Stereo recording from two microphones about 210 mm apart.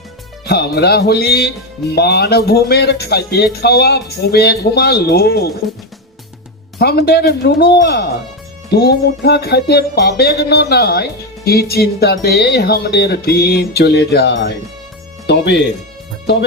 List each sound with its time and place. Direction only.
0.4 s music: 50° left (ahead or behind)
6.7 s music: 50° left (ahead or behind)
15.3 s speech: 55° left (ahead or behind)